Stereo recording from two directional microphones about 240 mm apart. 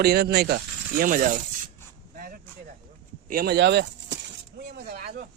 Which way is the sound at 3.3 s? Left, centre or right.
Right.